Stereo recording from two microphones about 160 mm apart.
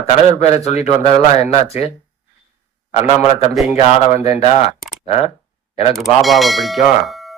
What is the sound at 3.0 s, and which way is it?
Speech, 40° left (ahead or behind).